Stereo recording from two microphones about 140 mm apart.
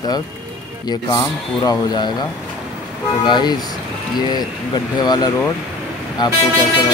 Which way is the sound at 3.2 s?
30° left (ahead or behind).